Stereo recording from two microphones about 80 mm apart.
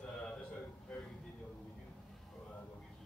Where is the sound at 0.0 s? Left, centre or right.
Centre.